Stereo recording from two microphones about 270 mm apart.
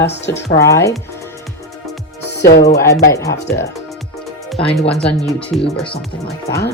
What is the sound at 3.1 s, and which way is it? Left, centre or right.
Speech, centre.